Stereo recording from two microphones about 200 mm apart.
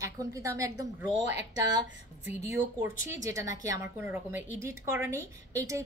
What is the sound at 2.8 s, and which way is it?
Speech, 40° left (ahead or behind).